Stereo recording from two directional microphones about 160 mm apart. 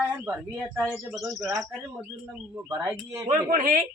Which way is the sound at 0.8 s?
5° right (ahead or behind).